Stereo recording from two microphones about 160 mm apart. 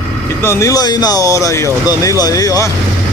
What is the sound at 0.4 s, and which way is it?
Speech, 15° left (ahead or behind).